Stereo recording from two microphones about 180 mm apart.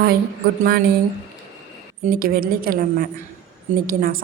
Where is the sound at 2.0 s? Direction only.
55° right (ahead or behind).